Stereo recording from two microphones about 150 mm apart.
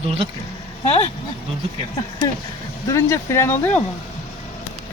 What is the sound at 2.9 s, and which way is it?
Speech, 20° left (ahead or behind).